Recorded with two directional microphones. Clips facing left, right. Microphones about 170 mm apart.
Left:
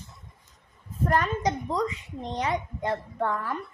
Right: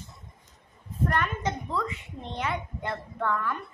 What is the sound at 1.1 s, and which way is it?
A woman's voice, 35° left (ahead or behind).